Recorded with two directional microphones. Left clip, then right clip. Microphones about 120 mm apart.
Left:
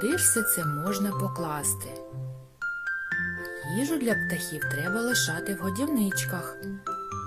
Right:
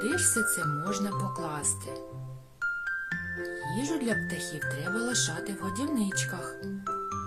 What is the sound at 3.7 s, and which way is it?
Speech, 40° left (ahead or behind).